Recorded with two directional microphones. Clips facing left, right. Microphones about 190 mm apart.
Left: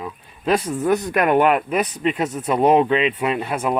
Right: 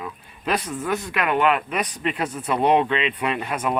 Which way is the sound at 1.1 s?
45° left (ahead or behind).